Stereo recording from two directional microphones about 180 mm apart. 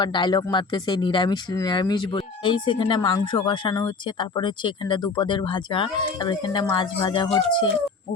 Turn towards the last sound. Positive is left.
turn(degrees=25)  # may be behind; listen again after turning